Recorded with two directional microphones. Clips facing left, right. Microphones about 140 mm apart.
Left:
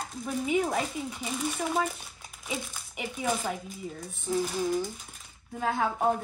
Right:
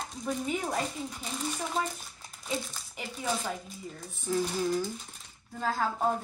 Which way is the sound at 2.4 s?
10° left (ahead or behind).